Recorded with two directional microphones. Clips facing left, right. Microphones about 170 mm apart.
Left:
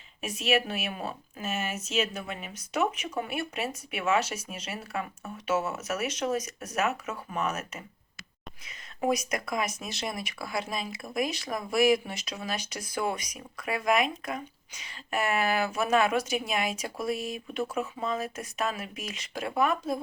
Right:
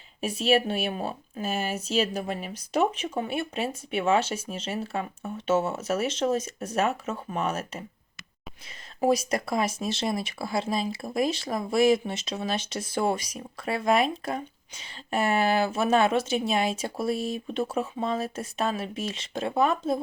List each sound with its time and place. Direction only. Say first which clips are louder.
0.2 s speech: right 4 dB; 30° right (ahead or behind)